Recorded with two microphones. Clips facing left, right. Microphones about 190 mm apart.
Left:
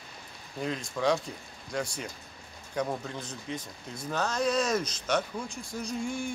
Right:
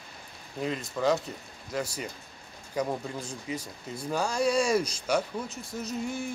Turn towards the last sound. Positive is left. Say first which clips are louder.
# even
turn(degrees=-5)  # may be behind; listen again after turning